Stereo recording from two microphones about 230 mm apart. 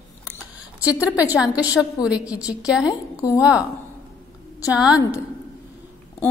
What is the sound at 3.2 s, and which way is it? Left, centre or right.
Speech, centre.